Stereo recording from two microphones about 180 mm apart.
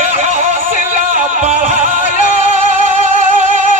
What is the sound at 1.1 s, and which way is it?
Music, 40° right (ahead or behind).